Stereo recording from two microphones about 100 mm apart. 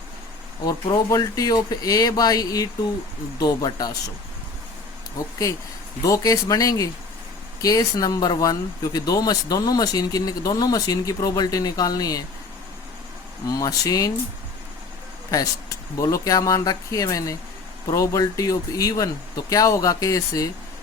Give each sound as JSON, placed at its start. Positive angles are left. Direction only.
{"t": 0.6, "sound": "speech", "side_deg": 40}
{"t": 6.1, "sound": "speech", "side_deg": 35}
{"t": 13.5, "sound": "speech", "side_deg": 35}
{"t": 16.0, "sound": "speech", "side_deg": 30}